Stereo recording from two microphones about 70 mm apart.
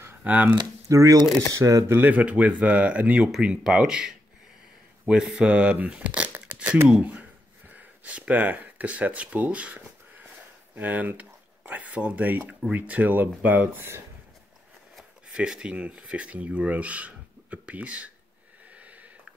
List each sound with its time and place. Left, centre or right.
0.0 s a sound: right
0.8 s speech: right
1.9 s speech: right
6.3 s tearing: right
6.9 s speech: centre
15.0 s shuffling cards: centre
15.7 s speech: centre
18.8 s sniff: right